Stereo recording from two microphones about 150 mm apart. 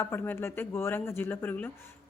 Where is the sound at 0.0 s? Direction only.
15° left (ahead or behind).